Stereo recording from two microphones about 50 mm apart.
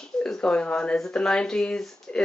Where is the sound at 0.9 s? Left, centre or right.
Centre.